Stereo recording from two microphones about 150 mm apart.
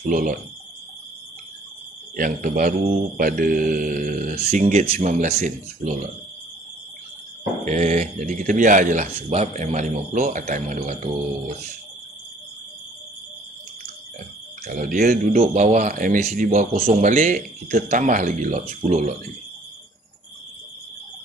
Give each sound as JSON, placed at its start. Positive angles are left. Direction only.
{"t": 0.1, "sound": "a man's voice", "side_deg": -65}
{"t": 2.1, "sound": "a man's voice", "side_deg": -65}
{"t": 7.6, "sound": "a man's voice", "side_deg": -50}
{"t": 14.7, "sound": "a man's voice", "side_deg": -60}
{"t": 18.8, "sound": "a man's voice", "side_deg": -50}